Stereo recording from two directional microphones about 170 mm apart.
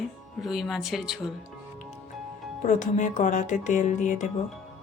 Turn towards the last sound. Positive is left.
turn(degrees=45)  # may be behind; listen again after turning